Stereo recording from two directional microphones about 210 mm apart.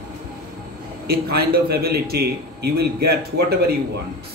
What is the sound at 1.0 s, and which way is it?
A man's voice, 50° right (ahead or behind).